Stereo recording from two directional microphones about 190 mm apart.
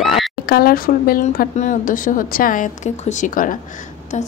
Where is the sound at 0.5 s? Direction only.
55° left (ahead or behind).